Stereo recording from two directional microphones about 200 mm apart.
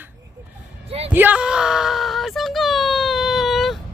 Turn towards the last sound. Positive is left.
turn(degrees=0)  # may be behind; listen again after turning